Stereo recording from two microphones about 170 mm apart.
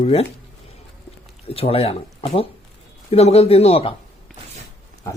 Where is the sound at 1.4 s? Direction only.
35° left (ahead or behind).